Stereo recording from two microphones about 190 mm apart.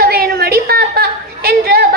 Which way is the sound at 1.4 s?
55° right (ahead or behind).